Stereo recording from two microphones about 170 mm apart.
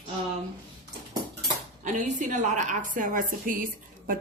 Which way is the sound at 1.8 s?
45° right (ahead or behind).